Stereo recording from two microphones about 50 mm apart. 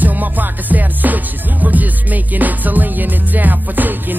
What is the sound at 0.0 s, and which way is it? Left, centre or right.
Music, right.